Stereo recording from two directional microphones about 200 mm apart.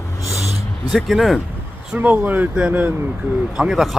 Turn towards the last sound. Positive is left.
turn(degrees=0)  # may be behind; listen again after turning